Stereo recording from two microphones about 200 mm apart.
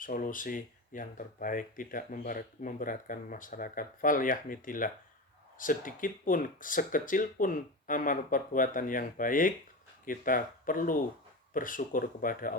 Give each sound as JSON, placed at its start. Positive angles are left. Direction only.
{"t": 0.0, "sound": "speech", "side_deg": 40}